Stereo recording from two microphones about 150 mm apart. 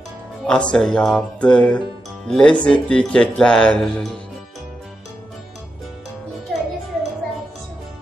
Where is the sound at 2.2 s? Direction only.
5° left (ahead or behind).